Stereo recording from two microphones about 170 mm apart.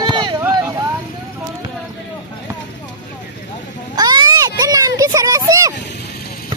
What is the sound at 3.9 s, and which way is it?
Children playing, 25° right (ahead or behind).